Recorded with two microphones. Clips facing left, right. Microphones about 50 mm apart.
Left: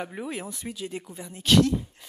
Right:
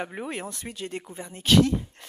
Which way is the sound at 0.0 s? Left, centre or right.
Centre.